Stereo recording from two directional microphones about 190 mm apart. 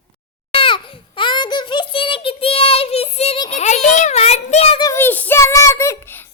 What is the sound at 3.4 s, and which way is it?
A child's voice, 40° left (ahead or behind).